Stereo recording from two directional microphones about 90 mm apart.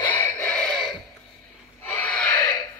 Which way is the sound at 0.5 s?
10° left (ahead or behind).